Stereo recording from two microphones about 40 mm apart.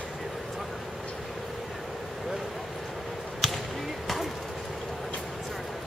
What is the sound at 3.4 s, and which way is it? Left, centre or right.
Basketball bounce, centre.